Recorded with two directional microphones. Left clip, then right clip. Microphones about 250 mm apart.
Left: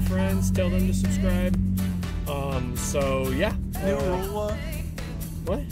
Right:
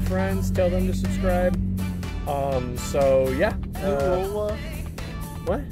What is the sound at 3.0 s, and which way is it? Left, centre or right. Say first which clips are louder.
Speech: right 7 dB; centre.